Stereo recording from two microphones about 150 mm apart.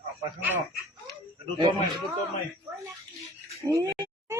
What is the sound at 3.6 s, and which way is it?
Oink, 20° right (ahead or behind).